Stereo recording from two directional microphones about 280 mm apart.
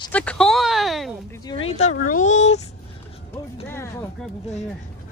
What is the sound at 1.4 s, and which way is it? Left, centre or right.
Speech, centre.